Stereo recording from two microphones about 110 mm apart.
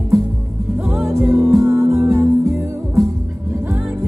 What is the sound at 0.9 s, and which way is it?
Music, 5° right (ahead or behind).